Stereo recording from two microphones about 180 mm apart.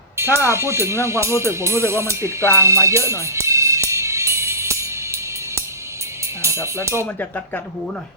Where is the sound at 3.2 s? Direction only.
15° right (ahead or behind).